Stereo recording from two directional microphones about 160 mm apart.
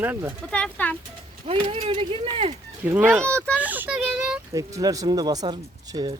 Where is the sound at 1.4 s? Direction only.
35° right (ahead or behind).